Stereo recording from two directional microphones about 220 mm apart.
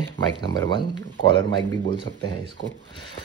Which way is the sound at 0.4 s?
20° left (ahead or behind).